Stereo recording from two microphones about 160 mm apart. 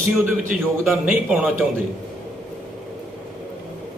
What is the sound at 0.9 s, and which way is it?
Speech, 5° right (ahead or behind).